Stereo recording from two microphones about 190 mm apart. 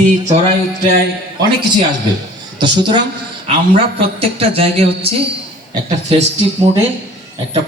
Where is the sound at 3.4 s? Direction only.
30° right (ahead or behind).